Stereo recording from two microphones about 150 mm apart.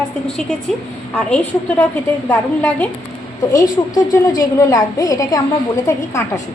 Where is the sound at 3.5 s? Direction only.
25° left (ahead or behind).